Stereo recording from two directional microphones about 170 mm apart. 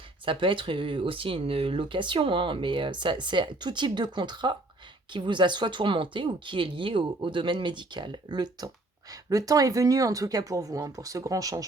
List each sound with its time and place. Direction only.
0.3 s speech: 30° right (ahead or behind)